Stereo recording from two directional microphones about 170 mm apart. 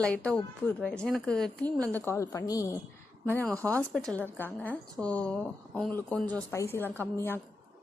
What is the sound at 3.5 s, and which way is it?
Speech, 15° right (ahead or behind).